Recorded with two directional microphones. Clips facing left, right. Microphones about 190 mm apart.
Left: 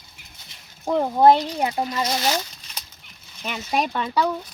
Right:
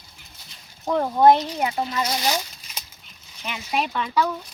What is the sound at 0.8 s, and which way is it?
Speech, 10° left (ahead or behind).